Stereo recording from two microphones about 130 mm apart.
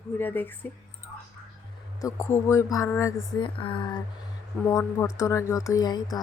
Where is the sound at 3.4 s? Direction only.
40° left (ahead or behind).